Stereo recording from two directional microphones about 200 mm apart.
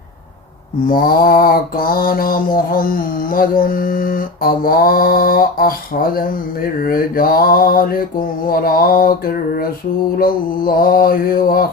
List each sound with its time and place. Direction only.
0.9 s mantra: 45° left (ahead or behind)